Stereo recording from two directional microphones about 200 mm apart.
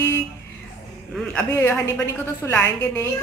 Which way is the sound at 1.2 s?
10° left (ahead or behind).